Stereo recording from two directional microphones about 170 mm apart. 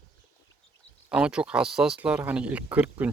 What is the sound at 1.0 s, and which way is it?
Speech, 5° right (ahead or behind).